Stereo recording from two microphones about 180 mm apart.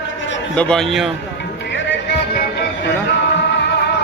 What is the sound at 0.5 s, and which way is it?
Speech, 5° left (ahead or behind).